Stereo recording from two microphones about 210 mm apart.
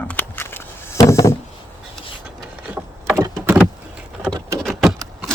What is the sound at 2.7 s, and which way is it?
Vehicle, 10° right (ahead or behind).